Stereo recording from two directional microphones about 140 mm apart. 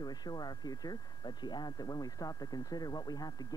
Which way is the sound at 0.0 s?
30° left (ahead or behind).